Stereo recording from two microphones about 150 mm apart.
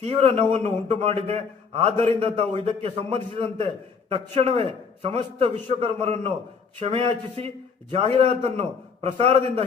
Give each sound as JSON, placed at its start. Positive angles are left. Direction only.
{"t": 0.0, "sound": "a man's voice", "side_deg": -40}